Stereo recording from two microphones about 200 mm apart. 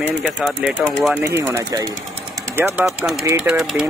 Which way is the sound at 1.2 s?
15° right (ahead or behind).